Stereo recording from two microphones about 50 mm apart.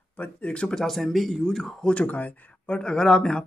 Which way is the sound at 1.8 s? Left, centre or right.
Left.